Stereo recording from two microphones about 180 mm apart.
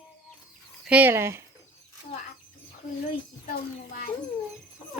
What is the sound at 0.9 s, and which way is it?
Speech, 10° right (ahead or behind).